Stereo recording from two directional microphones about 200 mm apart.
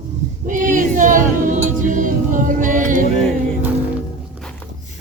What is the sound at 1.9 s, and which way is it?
Music, 40° right (ahead or behind).